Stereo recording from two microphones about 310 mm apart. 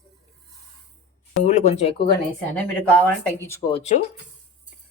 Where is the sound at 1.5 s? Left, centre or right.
Left.